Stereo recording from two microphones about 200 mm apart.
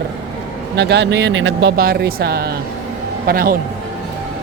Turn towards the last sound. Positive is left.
turn(degrees=-45)  # may be behind; listen again after turning